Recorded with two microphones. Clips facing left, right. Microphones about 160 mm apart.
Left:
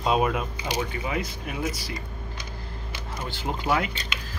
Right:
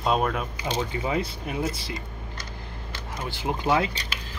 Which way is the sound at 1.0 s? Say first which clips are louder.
Right 3 dB; 30° right (ahead or behind).